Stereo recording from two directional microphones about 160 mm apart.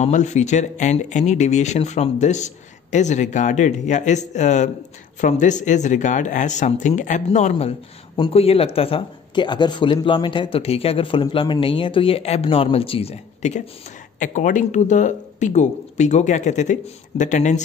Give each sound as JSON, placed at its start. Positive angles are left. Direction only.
{"t": 0.0, "sound": "speech", "side_deg": 45}